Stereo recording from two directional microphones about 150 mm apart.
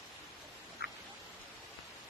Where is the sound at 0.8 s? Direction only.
90° left.